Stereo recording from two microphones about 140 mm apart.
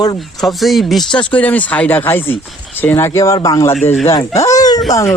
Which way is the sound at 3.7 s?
50° left (ahead or behind).